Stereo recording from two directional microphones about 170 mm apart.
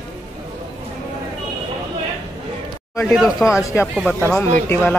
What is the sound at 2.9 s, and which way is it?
Speech, centre (ahead or behind).